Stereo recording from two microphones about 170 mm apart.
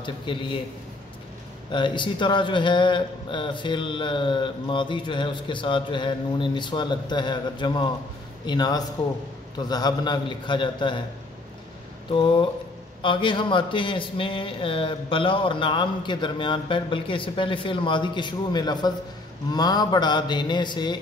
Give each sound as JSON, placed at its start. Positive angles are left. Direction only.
{"t": 0.0, "sound": "speech", "side_deg": 30}
{"t": 1.7, "sound": "speech", "side_deg": 30}
{"t": 12.1, "sound": "a sound", "side_deg": 30}
{"t": 13.0, "sound": "speech", "side_deg": 30}